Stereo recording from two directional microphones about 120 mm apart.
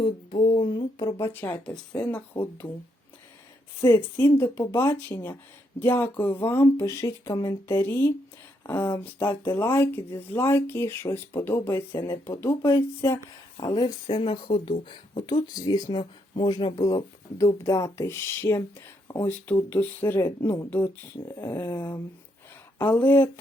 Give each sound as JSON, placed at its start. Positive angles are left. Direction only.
{"t": 0.0, "sound": "a sound", "side_deg": 40}
{"t": 1.3, "sound": "speech", "side_deg": 15}
{"t": 3.8, "sound": "speech", "side_deg": 20}
{"t": 13.6, "sound": "speech", "side_deg": 35}